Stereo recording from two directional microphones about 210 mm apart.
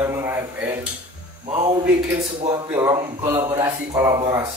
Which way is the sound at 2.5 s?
15° right (ahead or behind).